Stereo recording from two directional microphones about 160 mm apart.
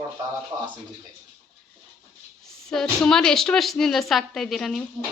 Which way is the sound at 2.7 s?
5° left (ahead or behind).